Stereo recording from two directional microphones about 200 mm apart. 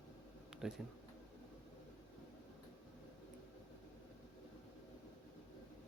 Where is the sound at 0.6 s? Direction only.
Centre (ahead or behind).